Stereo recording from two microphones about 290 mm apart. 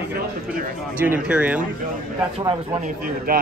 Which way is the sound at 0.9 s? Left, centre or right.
Centre.